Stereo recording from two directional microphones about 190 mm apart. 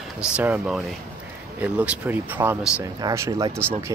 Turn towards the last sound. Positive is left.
turn(degrees=-15)  # may be behind; listen again after turning